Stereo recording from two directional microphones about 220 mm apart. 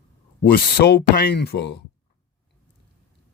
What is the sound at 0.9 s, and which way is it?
Speech, 50° left (ahead or behind).